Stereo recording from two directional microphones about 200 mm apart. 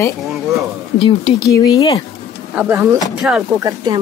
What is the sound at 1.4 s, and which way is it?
Speech, 15° left (ahead or behind).